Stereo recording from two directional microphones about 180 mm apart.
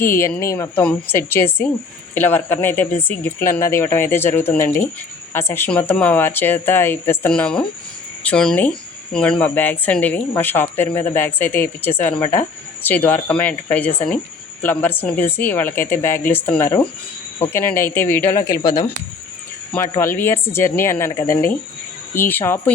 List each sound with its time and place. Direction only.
0.0 s a woman's voice: 15° left (ahead or behind)